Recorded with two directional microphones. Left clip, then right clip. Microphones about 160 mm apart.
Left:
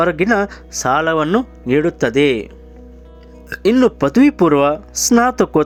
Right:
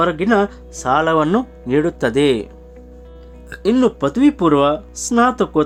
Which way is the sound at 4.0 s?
35° left (ahead or behind).